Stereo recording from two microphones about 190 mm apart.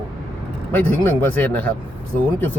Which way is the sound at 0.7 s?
10° left (ahead or behind).